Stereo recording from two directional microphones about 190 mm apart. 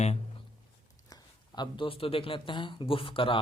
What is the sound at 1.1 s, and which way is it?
A man's voice, 25° left (ahead or behind).